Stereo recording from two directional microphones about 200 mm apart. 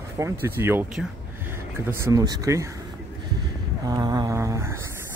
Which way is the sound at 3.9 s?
20° right (ahead or behind).